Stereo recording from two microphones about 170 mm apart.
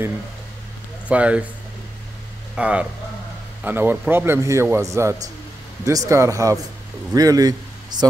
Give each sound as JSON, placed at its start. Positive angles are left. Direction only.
{"t": 1.0, "sound": "a man's voice", "side_deg": -10}
{"t": 2.5, "sound": "a man's voice", "side_deg": -5}